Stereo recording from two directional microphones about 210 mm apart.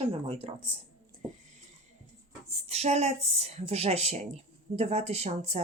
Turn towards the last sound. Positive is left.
turn(degrees=-30)  # may be behind; listen again after turning